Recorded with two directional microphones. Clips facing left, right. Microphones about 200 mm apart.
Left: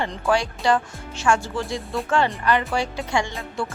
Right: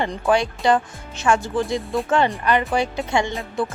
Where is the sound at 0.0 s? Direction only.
20° right (ahead or behind).